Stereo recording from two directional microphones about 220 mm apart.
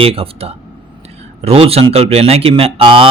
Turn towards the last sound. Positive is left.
turn(degrees=-25)  # may be behind; listen again after turning